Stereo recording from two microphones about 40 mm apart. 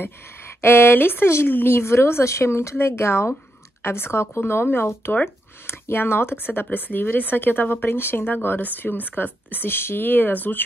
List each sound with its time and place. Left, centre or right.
0.0 s speech: left
5.7 s speech: left
9.7 s speech: left